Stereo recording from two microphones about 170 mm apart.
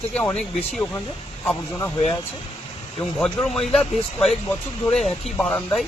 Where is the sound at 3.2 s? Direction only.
10° left (ahead or behind).